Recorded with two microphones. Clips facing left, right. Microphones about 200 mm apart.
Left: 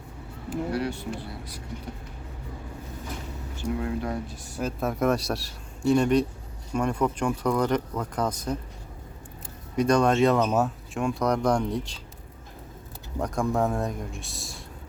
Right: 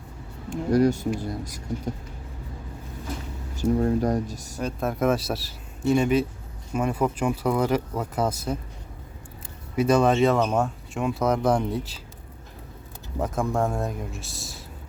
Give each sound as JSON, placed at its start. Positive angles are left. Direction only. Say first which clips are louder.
{"t": 0.7, "sound": "speech", "louder": "right 14 dB", "side_deg": -40}
{"t": 3.5, "sound": "speech", "louder": "right 7 dB", "side_deg": -40}
{"t": 4.6, "sound": "speech", "louder": "right 1 dB", "side_deg": 0}
{"t": 9.7, "sound": "speech", "louder": "right 1 dB", "side_deg": -5}
{"t": 13.1, "sound": "speech", "louder": "even", "side_deg": 0}